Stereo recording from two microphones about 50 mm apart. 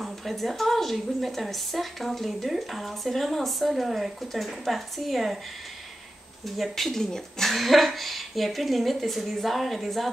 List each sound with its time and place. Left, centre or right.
0.0 s a woman's voice: centre
6.4 s a woman's voice: centre